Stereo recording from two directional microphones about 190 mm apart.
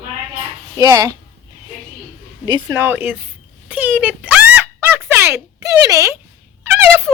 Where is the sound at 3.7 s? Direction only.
5° right (ahead or behind).